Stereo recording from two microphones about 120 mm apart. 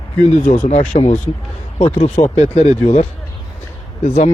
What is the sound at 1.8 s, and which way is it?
Speech, 55° left (ahead or behind).